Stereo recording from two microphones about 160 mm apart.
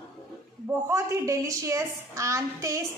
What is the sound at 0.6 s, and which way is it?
A woman's voice, 15° right (ahead or behind).